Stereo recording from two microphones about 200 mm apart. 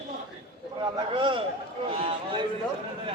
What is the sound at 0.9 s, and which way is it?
A man's voice, 25° right (ahead or behind).